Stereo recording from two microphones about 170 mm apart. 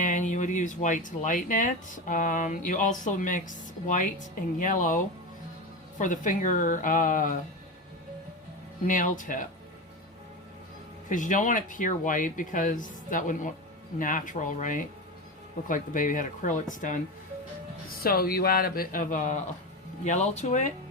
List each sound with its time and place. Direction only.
0.0 s speech: 50° left (ahead or behind)
8.9 s speech: 50° left (ahead or behind)
11.1 s speech: 50° left (ahead or behind)
18.0 s speech: 60° left (ahead or behind); by 20.7 s 45° left (ahead or behind)